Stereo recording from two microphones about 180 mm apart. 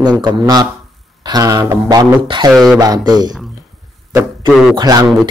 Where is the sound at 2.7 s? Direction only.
20° right (ahead or behind).